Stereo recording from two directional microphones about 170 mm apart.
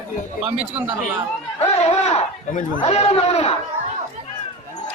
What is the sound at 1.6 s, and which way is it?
Speech, 40° left (ahead or behind).